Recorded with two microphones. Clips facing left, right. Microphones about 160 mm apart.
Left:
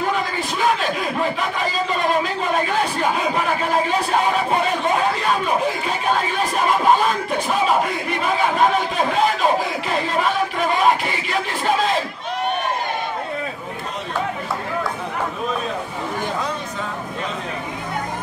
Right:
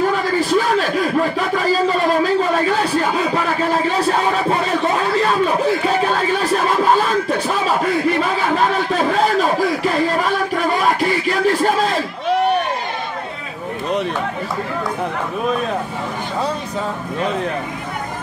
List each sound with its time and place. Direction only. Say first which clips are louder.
11.0 s music: right 6 dB; 40° right (ahead or behind)